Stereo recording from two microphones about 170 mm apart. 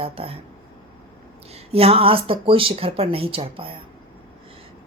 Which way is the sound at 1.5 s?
35° right (ahead or behind).